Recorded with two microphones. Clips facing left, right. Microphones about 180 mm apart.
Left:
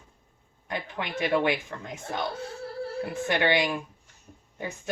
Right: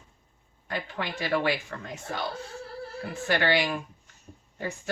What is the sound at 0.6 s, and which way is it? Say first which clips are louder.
Speech: even; 20° left (ahead or behind).